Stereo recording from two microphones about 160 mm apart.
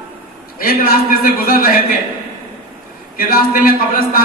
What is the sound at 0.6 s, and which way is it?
A man's voice, 65° left (ahead or behind).